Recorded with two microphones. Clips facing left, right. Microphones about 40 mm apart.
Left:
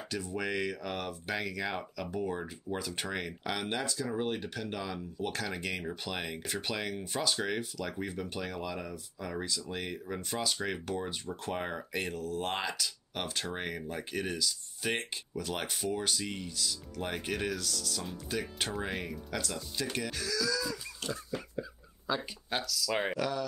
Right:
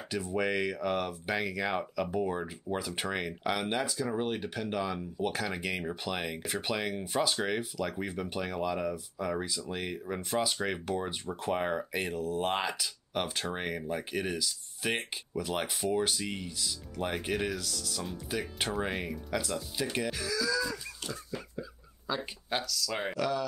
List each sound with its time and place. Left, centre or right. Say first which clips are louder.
0.1 s speech: right 4 dB; centre
21.1 s a sound: left 4 dB; centre
22.8 s speech: left 5 dB; centre